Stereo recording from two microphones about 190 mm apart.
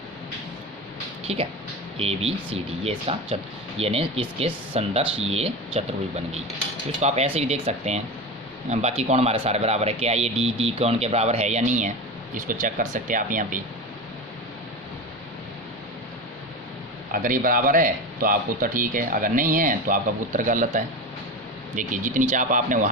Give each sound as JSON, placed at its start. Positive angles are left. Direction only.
{"t": 1.2, "sound": "speech", "side_deg": -35}
{"t": 17.1, "sound": "speech", "side_deg": -45}